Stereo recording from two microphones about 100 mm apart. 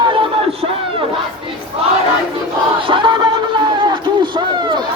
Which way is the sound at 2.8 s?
55° right (ahead or behind).